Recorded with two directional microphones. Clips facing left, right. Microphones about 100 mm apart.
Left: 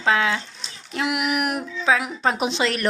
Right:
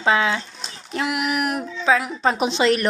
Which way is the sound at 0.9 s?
10° left (ahead or behind).